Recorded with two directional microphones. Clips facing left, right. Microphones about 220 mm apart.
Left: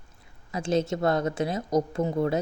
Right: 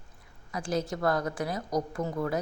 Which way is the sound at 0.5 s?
25° left (ahead or behind).